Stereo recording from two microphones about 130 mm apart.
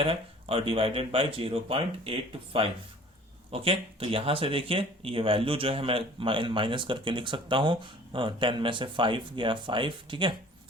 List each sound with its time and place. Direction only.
0.0 s speech: 45° right (ahead or behind)